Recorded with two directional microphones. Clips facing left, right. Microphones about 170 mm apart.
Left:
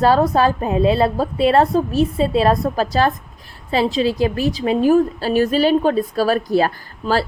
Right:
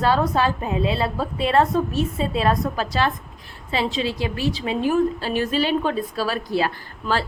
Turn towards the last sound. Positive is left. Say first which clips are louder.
# left 5 dB
turn(degrees=35)  # may be behind; listen again after turning